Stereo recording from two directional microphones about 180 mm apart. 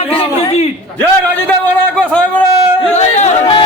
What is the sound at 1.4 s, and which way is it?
Speech, 5° left (ahead or behind).